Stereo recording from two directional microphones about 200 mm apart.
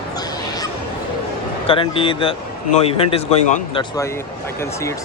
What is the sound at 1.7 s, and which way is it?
Speech, 25° left (ahead or behind).